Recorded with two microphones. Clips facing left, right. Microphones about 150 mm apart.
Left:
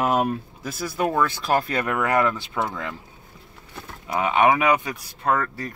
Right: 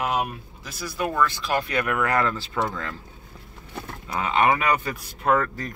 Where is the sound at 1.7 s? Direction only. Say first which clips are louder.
Left 1 dB; 30° left (ahead or behind).